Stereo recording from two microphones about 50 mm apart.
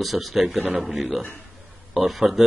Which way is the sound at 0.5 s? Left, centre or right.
Centre.